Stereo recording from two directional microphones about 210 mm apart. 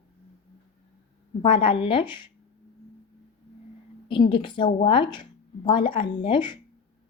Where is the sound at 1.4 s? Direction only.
25° left (ahead or behind).